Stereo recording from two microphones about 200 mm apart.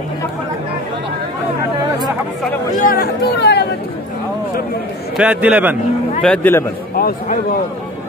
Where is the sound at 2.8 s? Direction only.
50° left (ahead or behind).